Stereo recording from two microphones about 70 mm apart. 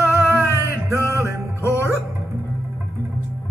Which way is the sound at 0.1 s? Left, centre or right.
Right.